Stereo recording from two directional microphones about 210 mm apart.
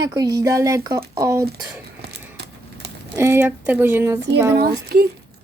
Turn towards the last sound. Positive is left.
turn(degrees=-50)  # may be behind; listen again after turning